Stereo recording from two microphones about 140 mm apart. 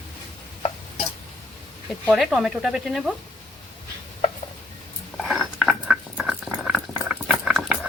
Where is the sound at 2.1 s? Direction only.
Centre (ahead or behind).